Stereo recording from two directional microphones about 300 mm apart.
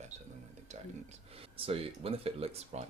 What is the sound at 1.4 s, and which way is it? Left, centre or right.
Speech, centre.